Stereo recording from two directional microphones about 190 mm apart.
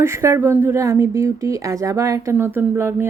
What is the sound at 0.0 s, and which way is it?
Speech, 15° right (ahead or behind).